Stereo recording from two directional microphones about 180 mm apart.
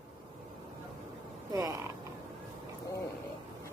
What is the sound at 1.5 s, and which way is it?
Creak, 15° right (ahead or behind).